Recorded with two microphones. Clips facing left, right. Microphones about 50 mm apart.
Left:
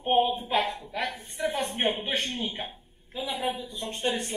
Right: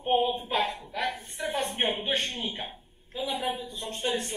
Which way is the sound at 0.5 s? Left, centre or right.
Centre.